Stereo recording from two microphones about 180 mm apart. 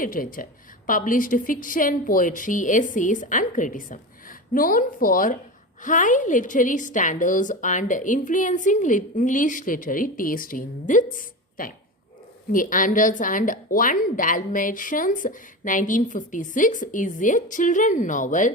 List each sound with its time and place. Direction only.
0.0 s a woman's voice: 50° left (ahead or behind)